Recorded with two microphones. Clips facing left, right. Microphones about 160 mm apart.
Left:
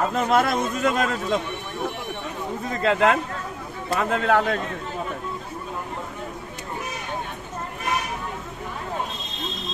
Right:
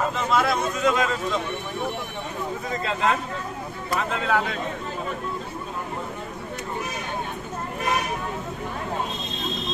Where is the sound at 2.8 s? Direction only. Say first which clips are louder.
Left 5 dB; 65° left (ahead or behind).